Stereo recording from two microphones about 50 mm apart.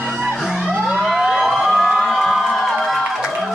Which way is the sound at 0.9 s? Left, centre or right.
Centre.